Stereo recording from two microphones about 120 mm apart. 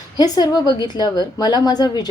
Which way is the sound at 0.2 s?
35° left (ahead or behind).